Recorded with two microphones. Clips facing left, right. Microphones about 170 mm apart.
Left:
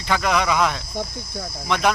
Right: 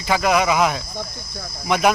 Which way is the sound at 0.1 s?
10° right (ahead or behind).